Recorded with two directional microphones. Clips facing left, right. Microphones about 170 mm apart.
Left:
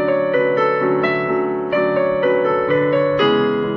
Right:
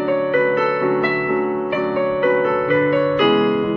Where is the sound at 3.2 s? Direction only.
15° right (ahead or behind).